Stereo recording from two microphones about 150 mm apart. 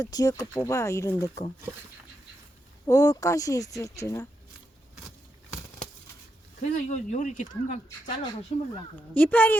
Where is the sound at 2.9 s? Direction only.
20° left (ahead or behind).